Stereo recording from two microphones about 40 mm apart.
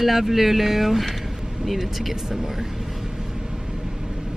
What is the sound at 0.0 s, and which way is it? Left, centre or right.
Speech, centre.